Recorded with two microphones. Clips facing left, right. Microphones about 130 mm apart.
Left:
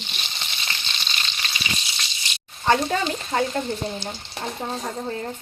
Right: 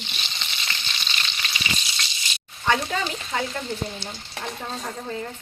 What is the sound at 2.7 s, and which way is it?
Speech, 35° left (ahead or behind).